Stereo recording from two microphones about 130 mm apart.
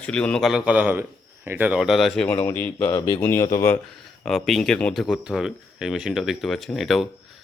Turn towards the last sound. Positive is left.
turn(degrees=0)  # may be behind; listen again after turning